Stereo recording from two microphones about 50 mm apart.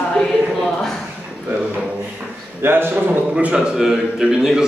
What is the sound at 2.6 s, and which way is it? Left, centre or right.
Speech, right.